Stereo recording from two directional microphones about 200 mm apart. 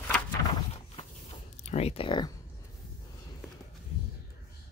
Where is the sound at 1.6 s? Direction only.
30° left (ahead or behind).